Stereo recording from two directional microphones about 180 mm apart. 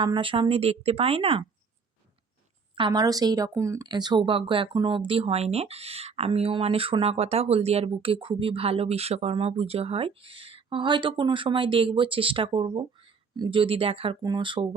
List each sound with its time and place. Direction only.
0.0 s speech: 25° right (ahead or behind)
2.7 s speech: 25° right (ahead or behind)